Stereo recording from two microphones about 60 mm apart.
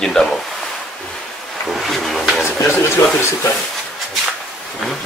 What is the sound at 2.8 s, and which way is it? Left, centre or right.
Speech, left.